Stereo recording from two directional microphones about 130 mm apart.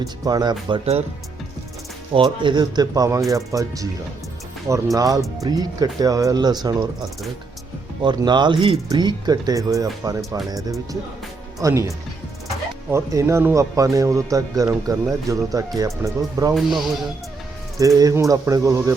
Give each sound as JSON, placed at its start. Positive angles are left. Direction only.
{"t": 0.0, "sound": "speech", "side_deg": -30}
{"t": 2.1, "sound": "speech", "side_deg": -35}
{"t": 4.9, "sound": "speech", "side_deg": -25}
{"t": 11.6, "sound": "speech", "side_deg": -25}
{"t": 16.6, "sound": "speech", "side_deg": 0}
{"t": 17.7, "sound": "speech", "side_deg": -25}